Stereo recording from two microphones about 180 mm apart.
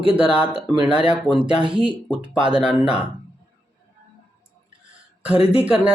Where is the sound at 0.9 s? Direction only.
5° right (ahead or behind).